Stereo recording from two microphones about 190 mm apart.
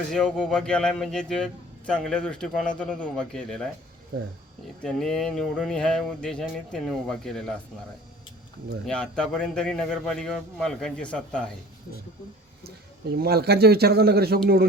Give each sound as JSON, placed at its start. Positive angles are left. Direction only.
{"t": 0.1, "sound": "speech", "side_deg": 5}
{"t": 4.8, "sound": "speech", "side_deg": 5}
{"t": 8.9, "sound": "speech", "side_deg": 5}
{"t": 13.1, "sound": "speech", "side_deg": -55}